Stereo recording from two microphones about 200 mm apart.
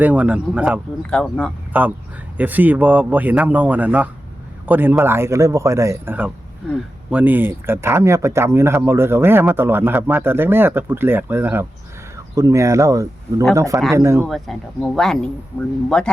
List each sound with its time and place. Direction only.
0.0 s speech: 5° right (ahead or behind)
1.1 s speech: 5° left (ahead or behind)
1.7 s speech: 10° right (ahead or behind)
14.3 s speech: centre (ahead or behind)